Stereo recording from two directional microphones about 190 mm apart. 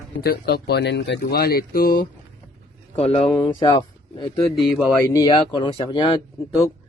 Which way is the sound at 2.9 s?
30° left (ahead or behind).